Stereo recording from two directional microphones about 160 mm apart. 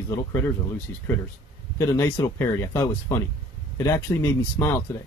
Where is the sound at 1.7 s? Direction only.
20° left (ahead or behind).